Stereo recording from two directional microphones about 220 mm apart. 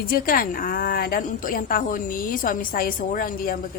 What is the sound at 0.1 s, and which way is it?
A woman's voice, 40° left (ahead or behind).